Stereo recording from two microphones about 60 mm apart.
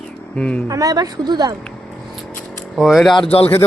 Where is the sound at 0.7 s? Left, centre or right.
Right.